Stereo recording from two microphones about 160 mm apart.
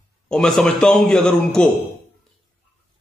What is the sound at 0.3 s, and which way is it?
A man's voice, 5° left (ahead or behind).